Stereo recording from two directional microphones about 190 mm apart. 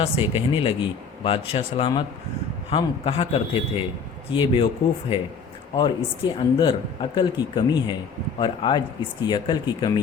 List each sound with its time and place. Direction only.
0.0 s a man's voice: 30° left (ahead or behind)